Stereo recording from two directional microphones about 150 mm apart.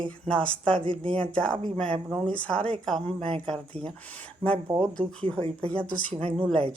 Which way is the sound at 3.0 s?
40° right (ahead or behind).